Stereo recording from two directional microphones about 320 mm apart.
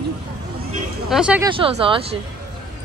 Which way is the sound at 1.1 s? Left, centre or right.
Centre.